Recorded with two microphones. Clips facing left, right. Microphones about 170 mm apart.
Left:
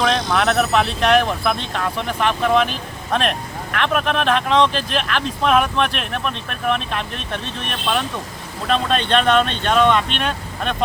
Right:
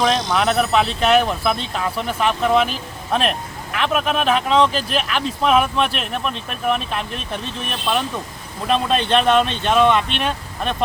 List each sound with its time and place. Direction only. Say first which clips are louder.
0.0 s speech: even; 5° right (ahead or behind)
8.6 s speech: right 1 dB; 5° right (ahead or behind)